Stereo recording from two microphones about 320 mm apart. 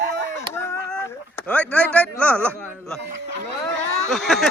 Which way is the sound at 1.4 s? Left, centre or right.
Centre.